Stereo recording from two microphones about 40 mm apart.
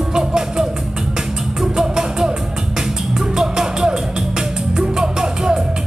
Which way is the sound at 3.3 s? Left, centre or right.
Centre.